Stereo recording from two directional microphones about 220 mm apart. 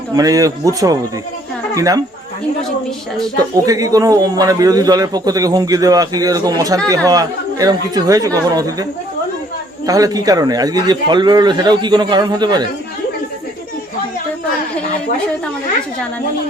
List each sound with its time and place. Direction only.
0.1 s a man's voice: 15° right (ahead or behind)
3.5 s a man's voice: 15° right (ahead or behind)